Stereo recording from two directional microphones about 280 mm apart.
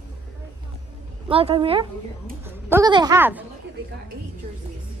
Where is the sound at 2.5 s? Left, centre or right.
Centre.